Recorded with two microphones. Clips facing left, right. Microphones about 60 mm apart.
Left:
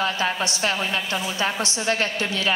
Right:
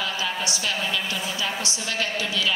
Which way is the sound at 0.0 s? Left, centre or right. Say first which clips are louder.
Left 4 dB; left.